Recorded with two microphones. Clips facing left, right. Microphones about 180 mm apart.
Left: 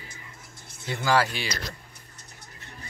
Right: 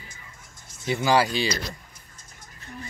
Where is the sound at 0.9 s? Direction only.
15° right (ahead or behind).